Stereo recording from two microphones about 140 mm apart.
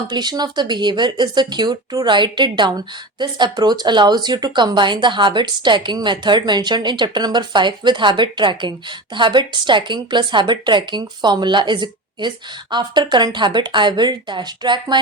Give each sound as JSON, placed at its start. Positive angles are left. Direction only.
{"t": 0.1, "sound": "speech", "side_deg": -30}